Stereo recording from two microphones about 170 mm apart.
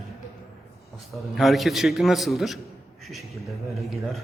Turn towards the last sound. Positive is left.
turn(degrees=0)  # may be behind; listen again after turning